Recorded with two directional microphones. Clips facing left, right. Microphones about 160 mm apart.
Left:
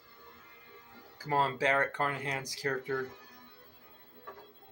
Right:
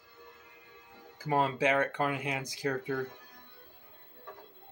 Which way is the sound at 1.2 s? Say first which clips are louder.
Right 2 dB; 15° right (ahead or behind).